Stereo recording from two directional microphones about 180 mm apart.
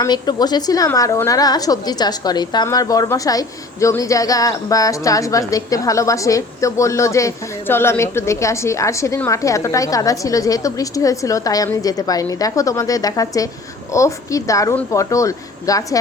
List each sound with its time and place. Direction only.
0.0 s a woman's voice: 25° left (ahead or behind)